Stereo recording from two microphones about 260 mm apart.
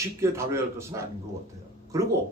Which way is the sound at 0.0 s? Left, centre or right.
Centre.